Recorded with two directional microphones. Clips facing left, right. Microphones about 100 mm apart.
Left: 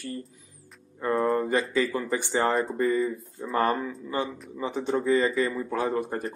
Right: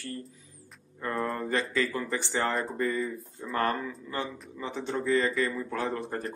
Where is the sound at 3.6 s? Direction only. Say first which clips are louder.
Left 3 dB; 15° left (ahead or behind).